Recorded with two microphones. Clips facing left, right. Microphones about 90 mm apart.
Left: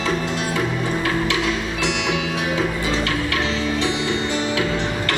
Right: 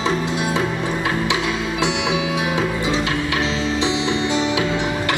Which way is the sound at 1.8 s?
15° right (ahead or behind).